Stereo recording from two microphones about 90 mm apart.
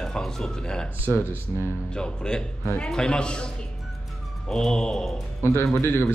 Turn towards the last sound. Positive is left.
turn(degrees=25)  # may be behind; listen again after turning